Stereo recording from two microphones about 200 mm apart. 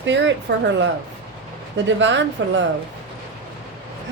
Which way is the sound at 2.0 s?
65° right (ahead or behind).